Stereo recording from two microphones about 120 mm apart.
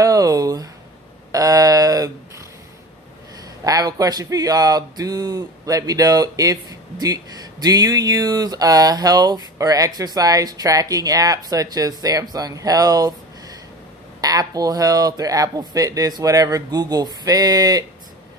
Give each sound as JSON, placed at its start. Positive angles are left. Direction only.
{"t": 0.0, "sound": "a sound", "side_deg": -30}
{"t": 3.6, "sound": "speech", "side_deg": -30}
{"t": 14.2, "sound": "speech", "side_deg": -30}